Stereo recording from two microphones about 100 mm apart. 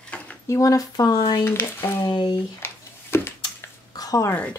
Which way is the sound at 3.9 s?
35° left (ahead or behind).